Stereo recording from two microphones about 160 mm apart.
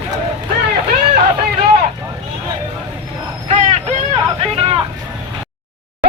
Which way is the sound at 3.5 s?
45° right (ahead or behind).